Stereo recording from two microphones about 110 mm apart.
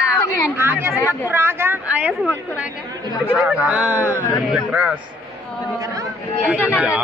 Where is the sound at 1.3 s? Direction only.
20° right (ahead or behind).